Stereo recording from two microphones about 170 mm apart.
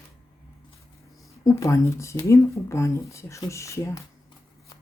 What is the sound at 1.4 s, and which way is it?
Speech, 15° left (ahead or behind).